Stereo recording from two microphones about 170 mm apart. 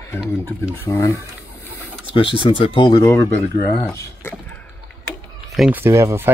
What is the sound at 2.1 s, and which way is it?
Speech, 30° left (ahead or behind).